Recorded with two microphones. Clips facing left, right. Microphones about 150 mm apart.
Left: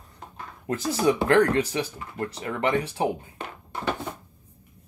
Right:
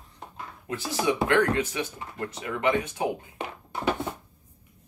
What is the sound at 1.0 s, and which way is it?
Speech, 40° left (ahead or behind).